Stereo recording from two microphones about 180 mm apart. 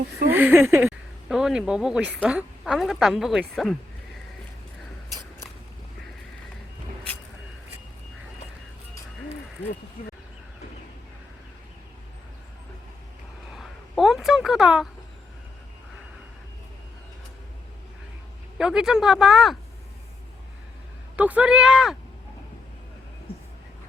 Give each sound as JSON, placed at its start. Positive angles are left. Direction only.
{"t": 0.3, "sound": "a sound", "side_deg": -10}
{"t": 1.3, "sound": "a woman's voice", "side_deg": -5}
{"t": 13.6, "sound": "speech", "side_deg": 0}
{"t": 18.5, "sound": "a woman's voice", "side_deg": -5}
{"t": 21.2, "sound": "a woman's voice", "side_deg": -5}